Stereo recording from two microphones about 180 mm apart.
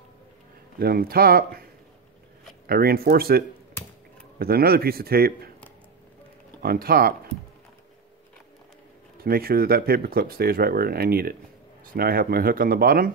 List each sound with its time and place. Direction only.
0.7 s speech: 55° right (ahead or behind)
6.6 s speech: 55° right (ahead or behind)
9.2 s speech: 55° right (ahead or behind)